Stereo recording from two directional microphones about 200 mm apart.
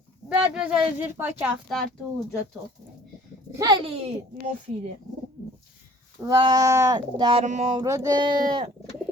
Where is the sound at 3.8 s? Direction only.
30° right (ahead or behind).